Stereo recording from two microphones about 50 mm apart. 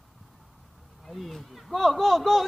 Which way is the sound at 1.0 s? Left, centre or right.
Centre.